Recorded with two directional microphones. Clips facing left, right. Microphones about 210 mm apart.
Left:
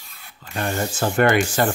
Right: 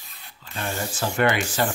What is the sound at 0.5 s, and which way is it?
Speech, 50° left (ahead or behind).